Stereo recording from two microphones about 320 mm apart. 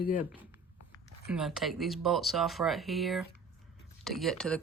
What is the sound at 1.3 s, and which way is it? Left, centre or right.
Speech, centre.